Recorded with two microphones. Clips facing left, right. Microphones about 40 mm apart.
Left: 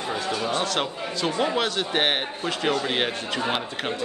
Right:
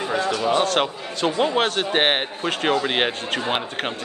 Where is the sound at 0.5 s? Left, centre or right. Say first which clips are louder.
Right 8 dB; right.